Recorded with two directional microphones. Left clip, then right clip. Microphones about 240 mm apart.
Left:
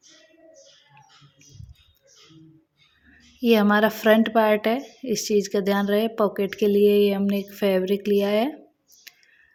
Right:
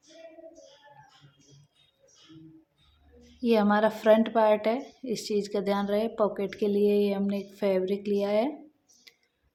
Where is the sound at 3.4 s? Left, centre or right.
Left.